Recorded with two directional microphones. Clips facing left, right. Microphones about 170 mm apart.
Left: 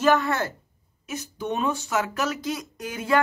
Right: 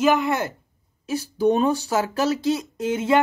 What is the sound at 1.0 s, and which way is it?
Speech, 35° right (ahead or behind).